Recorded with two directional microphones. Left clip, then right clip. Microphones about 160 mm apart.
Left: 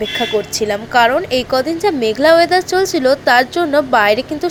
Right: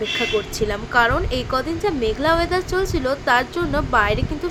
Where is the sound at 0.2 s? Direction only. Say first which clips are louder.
Left 7 dB; 25° left (ahead or behind).